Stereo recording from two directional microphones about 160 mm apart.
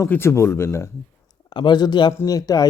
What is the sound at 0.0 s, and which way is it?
Speech, 15° left (ahead or behind).